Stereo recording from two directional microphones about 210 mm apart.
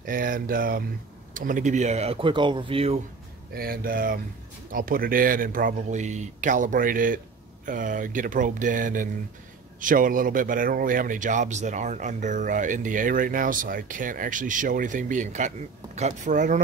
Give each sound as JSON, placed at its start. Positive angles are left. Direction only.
{"t": 0.0, "sound": "speech", "side_deg": -40}
{"t": 3.5, "sound": "speech", "side_deg": -45}